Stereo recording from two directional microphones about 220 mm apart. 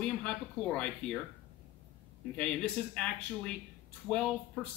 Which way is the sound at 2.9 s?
5° left (ahead or behind).